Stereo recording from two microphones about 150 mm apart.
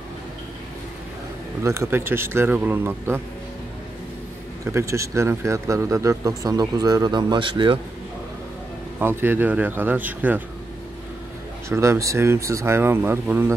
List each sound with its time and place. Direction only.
1.6 s speech: 20° right (ahead or behind)
4.6 s a man's voice: 20° right (ahead or behind)
9.0 s speech: 15° right (ahead or behind)
11.7 s speech: 20° right (ahead or behind)